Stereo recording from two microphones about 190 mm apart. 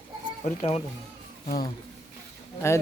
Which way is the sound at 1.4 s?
50° left (ahead or behind).